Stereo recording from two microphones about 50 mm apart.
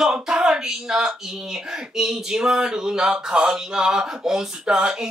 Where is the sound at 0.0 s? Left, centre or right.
Centre.